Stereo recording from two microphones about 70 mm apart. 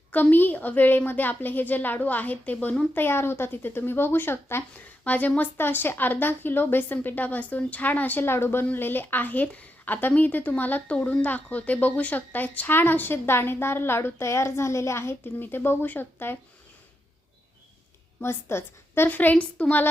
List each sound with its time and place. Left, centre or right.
0.1 s speech: left
5.0 s speech: left
18.2 s speech: left